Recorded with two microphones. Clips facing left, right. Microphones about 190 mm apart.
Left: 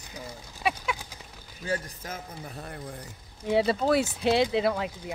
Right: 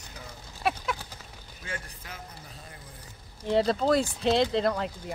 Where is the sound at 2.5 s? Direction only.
60° left (ahead or behind).